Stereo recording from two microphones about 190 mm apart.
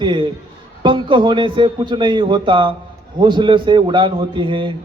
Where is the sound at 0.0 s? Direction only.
25° right (ahead or behind).